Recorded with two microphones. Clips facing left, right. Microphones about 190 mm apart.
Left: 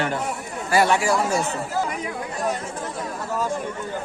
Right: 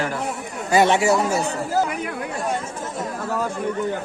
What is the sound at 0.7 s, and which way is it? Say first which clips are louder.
Speech: right 3 dB; 20° right (ahead or behind).